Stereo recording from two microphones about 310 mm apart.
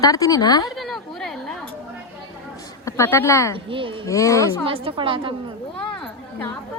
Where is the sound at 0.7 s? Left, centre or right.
Centre.